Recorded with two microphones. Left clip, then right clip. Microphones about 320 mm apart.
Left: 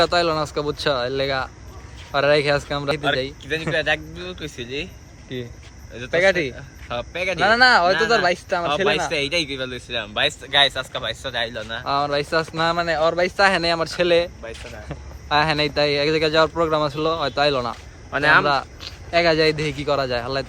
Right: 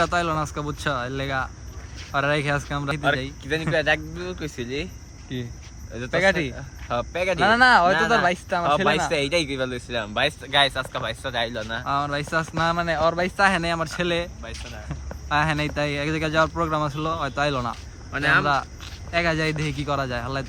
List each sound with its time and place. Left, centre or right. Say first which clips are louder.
0.0 s speech: left 4 dB; centre
3.7 s speech: even; right
5.3 s speech: left 3 dB; centre
6.8 s speech: right 1 dB; right
7.3 s speech: left 2 dB; centre
8.6 s speech: even; right
11.9 s speech: left 5 dB; centre
18.1 s speech: left 4 dB; centre
18.4 s speech: left 2 dB; centre